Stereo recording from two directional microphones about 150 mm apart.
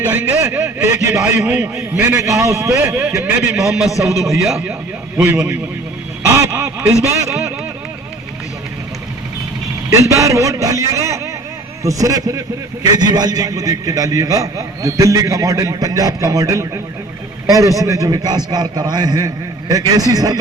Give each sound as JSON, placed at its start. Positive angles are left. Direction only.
{"t": 0.0, "sound": "a man's voice", "side_deg": -10}
{"t": 1.4, "sound": "a man's voice", "side_deg": -10}
{"t": 5.1, "sound": "a man's voice", "side_deg": -15}
{"t": 6.2, "sound": "a sound", "side_deg": -20}
{"t": 9.9, "sound": "a man's voice", "side_deg": -20}